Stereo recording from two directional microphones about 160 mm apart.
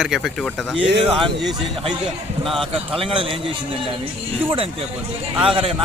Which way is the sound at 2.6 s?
35° right (ahead or behind).